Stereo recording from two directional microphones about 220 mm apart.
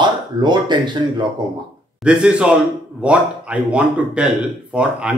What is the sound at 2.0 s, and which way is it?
A man's voice, 5° right (ahead or behind).